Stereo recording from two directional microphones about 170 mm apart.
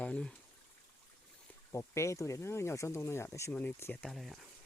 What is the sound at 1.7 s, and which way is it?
Speech, 15° left (ahead or behind).